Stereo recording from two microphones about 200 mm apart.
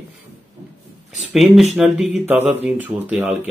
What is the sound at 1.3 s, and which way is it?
Speech, centre (ahead or behind).